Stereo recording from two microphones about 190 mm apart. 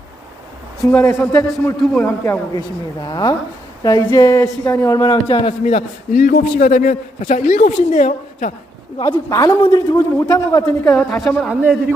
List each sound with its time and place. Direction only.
0.9 s a man's voice: 10° left (ahead or behind); by 8.5 s 45° left (ahead or behind)
9.1 s a man's voice: 20° left (ahead or behind)
11.1 s a woman's voice: 5° left (ahead or behind)